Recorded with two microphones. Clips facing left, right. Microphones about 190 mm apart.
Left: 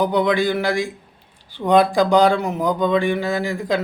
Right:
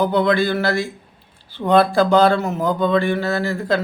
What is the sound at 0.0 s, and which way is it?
Speech, 15° left (ahead or behind).